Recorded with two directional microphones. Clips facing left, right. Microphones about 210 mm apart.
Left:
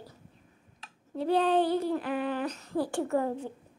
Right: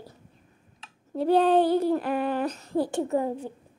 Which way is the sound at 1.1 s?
45° right (ahead or behind).